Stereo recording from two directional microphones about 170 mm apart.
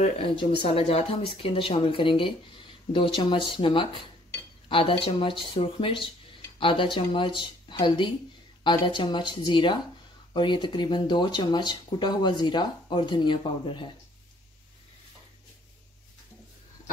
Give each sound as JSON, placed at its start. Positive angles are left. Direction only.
{"t": 0.4, "sound": "speech", "side_deg": 35}